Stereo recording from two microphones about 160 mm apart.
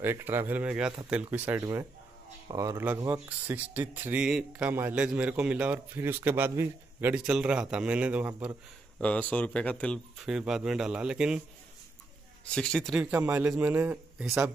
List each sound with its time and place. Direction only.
0.0 s speech: 15° right (ahead or behind)
9.0 s speech: 10° left (ahead or behind)
10.3 s a man's voice: 5° right (ahead or behind)
12.4 s a man's voice: 5° left (ahead or behind)
13.0 s speech: 10° right (ahead or behind)